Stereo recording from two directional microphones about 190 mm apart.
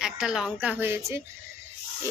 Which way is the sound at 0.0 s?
5° right (ahead or behind).